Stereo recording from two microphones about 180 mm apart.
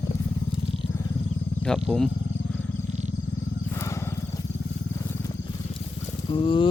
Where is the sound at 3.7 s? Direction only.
15° left (ahead or behind).